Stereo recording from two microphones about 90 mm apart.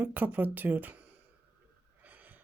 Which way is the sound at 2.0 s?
20° right (ahead or behind).